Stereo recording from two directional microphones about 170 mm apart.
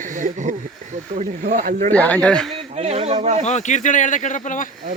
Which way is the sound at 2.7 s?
35° right (ahead or behind).